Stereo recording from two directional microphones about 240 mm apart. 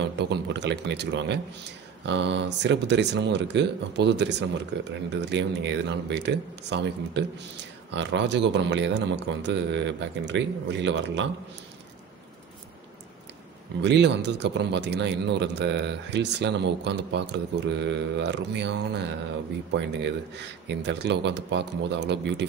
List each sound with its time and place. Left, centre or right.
0.2 s a man's voice: right
13.7 s a man's voice: right